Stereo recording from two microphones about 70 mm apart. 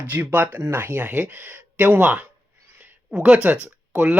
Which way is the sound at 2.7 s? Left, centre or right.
Centre.